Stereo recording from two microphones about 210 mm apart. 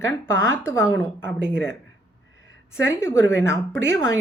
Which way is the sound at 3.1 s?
60° right (ahead or behind).